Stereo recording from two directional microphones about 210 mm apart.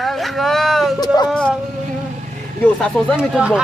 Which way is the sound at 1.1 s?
20° left (ahead or behind).